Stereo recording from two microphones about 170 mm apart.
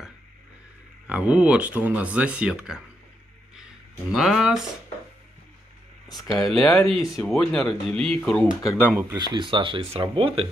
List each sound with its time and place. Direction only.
1.0 s speech: 10° right (ahead or behind)
4.1 s speech: centre (ahead or behind)
6.3 s speech: 20° left (ahead or behind)
6.6 s speech: 5° left (ahead or behind)
9.1 s speech: 25° right (ahead or behind)